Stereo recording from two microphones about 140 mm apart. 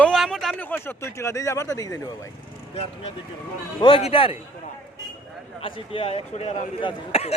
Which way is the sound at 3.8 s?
40° left (ahead or behind).